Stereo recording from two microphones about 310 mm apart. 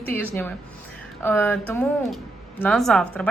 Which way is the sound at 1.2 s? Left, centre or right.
Centre.